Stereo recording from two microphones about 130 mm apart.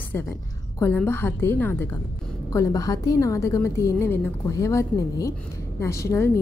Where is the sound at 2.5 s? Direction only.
25° left (ahead or behind).